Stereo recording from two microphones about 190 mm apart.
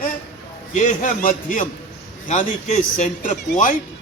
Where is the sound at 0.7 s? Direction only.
40° left (ahead or behind).